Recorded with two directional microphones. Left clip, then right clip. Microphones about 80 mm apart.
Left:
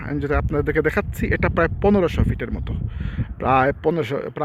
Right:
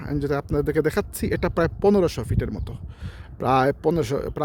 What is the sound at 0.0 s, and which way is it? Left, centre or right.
Speech, right.